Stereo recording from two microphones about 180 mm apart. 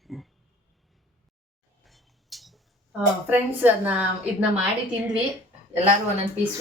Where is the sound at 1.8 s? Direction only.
Centre (ahead or behind).